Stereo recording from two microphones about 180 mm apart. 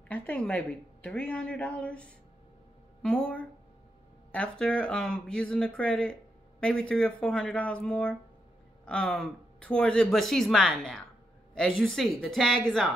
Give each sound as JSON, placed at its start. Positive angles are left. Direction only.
{"t": 0.1, "sound": "a woman's voice", "side_deg": 10}